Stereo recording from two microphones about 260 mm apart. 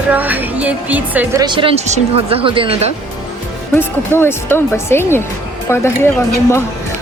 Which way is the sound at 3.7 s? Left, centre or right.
Centre.